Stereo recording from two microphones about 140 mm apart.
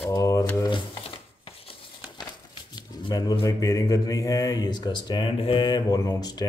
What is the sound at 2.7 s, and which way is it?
A man's voice, 25° left (ahead or behind).